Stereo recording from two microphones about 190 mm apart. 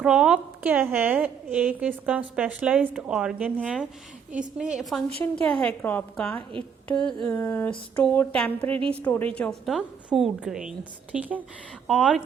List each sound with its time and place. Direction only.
0.0 s a woman's voice: 5° right (ahead or behind)